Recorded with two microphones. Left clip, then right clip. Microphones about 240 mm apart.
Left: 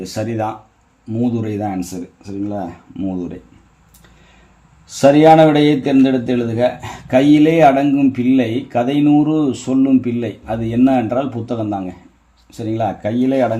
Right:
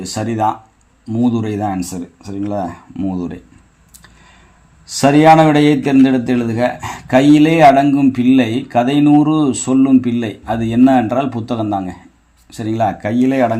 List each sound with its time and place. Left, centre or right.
0.0 s speech: centre
2.2 s speech: right
4.9 s speech: right